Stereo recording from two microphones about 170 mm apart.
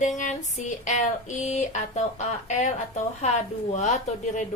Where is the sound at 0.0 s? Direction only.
45° left (ahead or behind).